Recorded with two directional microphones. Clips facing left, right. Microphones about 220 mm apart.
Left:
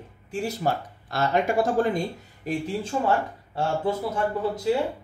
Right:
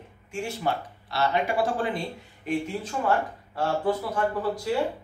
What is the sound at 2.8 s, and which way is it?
Speech, 25° left (ahead or behind).